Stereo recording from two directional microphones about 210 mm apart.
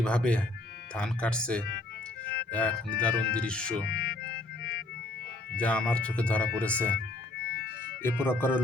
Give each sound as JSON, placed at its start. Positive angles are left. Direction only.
{"t": 0.0, "sound": "speech", "side_deg": 5}
{"t": 3.8, "sound": "speech", "side_deg": 50}
{"t": 5.5, "sound": "speech", "side_deg": 5}
{"t": 8.0, "sound": "speech", "side_deg": 10}